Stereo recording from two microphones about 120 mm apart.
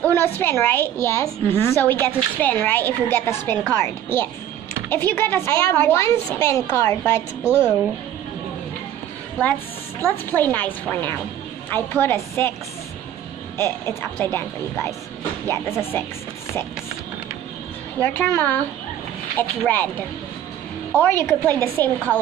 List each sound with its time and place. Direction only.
0.0 s a woman's voice: 20° left (ahead or behind)
7.4 s a woman's voice: 10° right (ahead or behind)
10.0 s a woman's voice: 15° left (ahead or behind)
13.6 s a woman's voice: 20° left (ahead or behind)
18.0 s a woman's voice: 15° left (ahead or behind)